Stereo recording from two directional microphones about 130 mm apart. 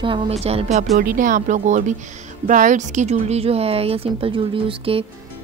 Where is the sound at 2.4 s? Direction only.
80° right.